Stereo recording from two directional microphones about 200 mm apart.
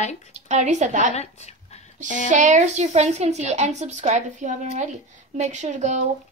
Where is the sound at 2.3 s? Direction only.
35° right (ahead or behind).